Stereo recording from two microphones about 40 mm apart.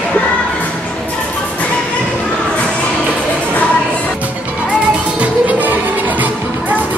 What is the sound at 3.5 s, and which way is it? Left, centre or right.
Music, left.